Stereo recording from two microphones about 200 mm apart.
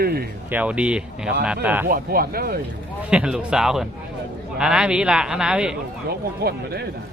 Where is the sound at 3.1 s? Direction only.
5° right (ahead or behind).